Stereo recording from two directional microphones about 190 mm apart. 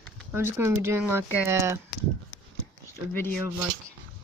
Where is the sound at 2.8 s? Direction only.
10° left (ahead or behind).